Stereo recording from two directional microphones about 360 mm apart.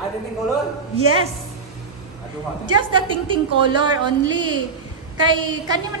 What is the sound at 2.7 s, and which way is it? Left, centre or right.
A woman's voice, centre.